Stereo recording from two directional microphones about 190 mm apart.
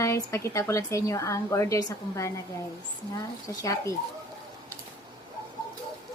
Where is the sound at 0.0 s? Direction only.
15° left (ahead or behind).